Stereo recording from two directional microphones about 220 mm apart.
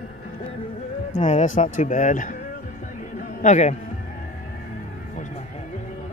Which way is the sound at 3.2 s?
35° left (ahead or behind).